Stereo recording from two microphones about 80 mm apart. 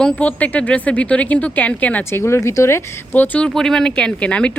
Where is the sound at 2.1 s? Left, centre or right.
Left.